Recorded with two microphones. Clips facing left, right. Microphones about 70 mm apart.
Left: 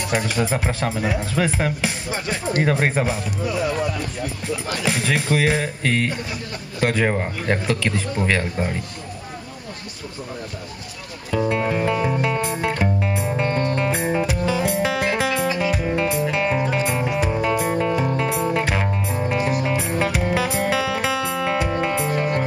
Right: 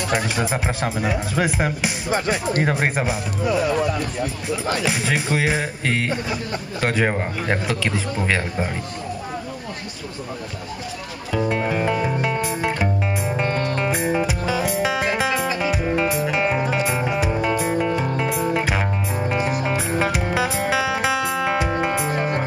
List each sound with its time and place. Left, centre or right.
0.4 s speech: centre
2.0 s speech: right
4.8 s speech: centre
11.6 s music: centre
17.8 s music: centre